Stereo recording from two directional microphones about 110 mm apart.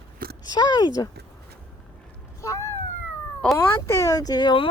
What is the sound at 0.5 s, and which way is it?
Speech, 40° left (ahead or behind).